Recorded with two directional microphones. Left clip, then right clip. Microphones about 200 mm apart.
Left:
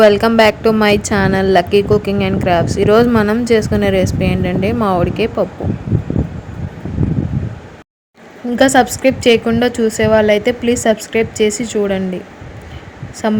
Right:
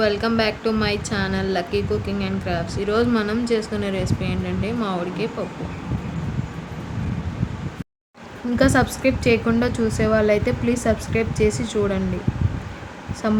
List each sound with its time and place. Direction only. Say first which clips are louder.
0.0 s a woman's voice: left 11 dB; 45° left (ahead or behind)
8.5 s a woman's voice: left 8 dB; 25° left (ahead or behind)
13.2 s a woman's voice: left 6 dB; 25° left (ahead or behind)